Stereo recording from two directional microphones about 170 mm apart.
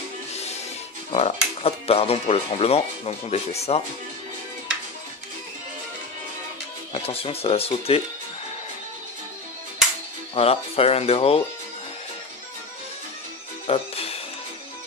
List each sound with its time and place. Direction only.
1.1 s speech: 35° left (ahead or behind)
6.9 s speech: 35° left (ahead or behind)
10.3 s speech: 35° left (ahead or behind)
13.7 s music: 35° left (ahead or behind)